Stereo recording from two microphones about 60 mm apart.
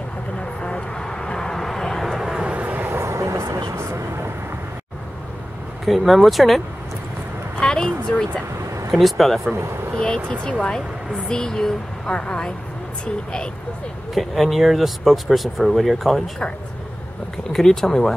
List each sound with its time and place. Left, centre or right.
0.4 s vehicle: centre
2.4 s vehicle: right
3.0 s vehicle: right
5.9 s speech: centre
7.6 s a sound: centre
8.9 s speech: centre
9.9 s speech: centre
14.1 s speech: centre
17.5 s speech: centre